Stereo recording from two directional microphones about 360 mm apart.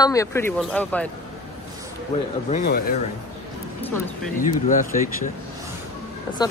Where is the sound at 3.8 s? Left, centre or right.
Centre.